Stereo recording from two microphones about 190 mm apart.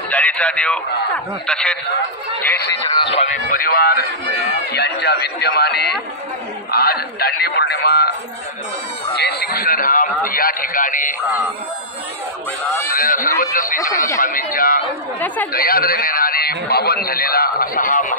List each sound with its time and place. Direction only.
0.1 s a man's voice: 5° left (ahead or behind)
3.0 s speech: 30° left (ahead or behind)
3.4 s a man's voice: 50° left (ahead or behind)
9.2 s a man's voice: 55° left (ahead or behind)
12.8 s a man's voice: 50° left (ahead or behind)
13.7 s a man's voice: 15° left (ahead or behind)
14.2 s a man's voice: 50° left (ahead or behind)
15.1 s a man's voice: 10° left (ahead or behind)
15.5 s a man's voice: 50° left (ahead or behind)